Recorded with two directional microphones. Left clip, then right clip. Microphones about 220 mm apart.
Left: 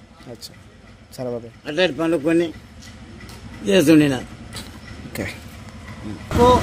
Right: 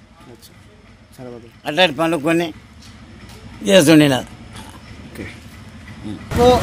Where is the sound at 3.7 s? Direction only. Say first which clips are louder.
Right 4 dB; 50° right (ahead or behind).